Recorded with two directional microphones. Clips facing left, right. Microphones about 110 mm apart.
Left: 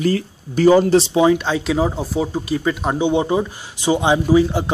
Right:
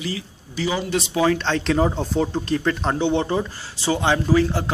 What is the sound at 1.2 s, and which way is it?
Speech, 10° left (ahead or behind).